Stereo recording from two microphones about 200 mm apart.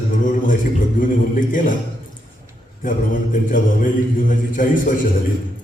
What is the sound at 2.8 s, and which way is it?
A man's voice, 40° left (ahead or behind).